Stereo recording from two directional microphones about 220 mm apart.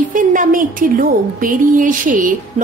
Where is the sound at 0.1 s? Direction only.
35° right (ahead or behind).